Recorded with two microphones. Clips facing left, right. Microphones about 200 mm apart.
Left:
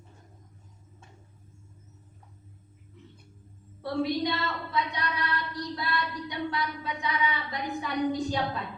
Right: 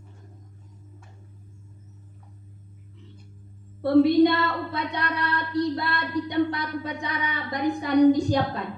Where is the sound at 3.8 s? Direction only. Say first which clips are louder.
Right 11 dB; 60° right (ahead or behind).